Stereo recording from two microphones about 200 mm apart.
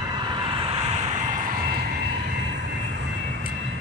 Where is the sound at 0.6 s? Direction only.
30° right (ahead or behind).